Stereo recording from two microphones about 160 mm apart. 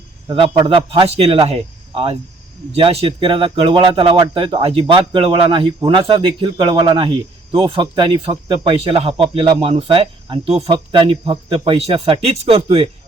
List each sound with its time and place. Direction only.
0.3 s speech: 30° right (ahead or behind)